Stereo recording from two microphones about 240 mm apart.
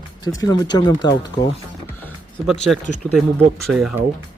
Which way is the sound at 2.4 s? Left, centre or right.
Centre.